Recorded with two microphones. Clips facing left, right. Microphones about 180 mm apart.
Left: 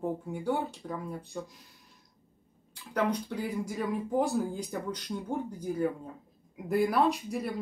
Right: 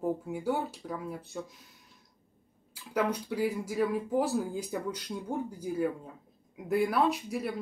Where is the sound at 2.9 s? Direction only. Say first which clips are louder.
Even; 5° right (ahead or behind).